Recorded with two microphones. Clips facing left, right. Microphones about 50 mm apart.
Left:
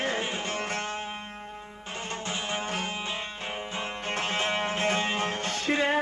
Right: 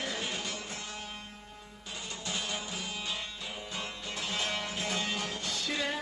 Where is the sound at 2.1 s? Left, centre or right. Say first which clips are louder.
Left 5 dB; left.